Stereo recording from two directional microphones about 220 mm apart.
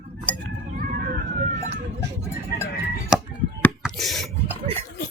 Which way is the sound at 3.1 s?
5° right (ahead or behind).